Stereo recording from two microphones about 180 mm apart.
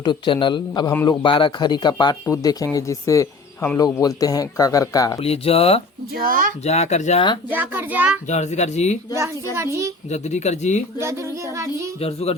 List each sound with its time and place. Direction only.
0.0 s speech: 25° left (ahead or behind)
5.2 s speech: 35° left (ahead or behind)
6.2 s speech: 50° right (ahead or behind)
6.7 s speech: 35° left (ahead or behind)
7.5 s child singing: 10° right (ahead or behind)
8.3 s speech: 40° left (ahead or behind)
9.1 s child singing: 15° right (ahead or behind)
10.1 s speech: 40° left (ahead or behind)
11.0 s child singing: 15° right (ahead or behind)
11.9 s speech: 35° left (ahead or behind)